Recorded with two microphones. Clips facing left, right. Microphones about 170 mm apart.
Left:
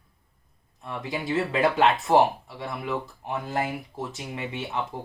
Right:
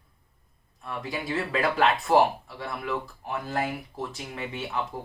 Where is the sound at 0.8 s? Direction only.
20° left (ahead or behind).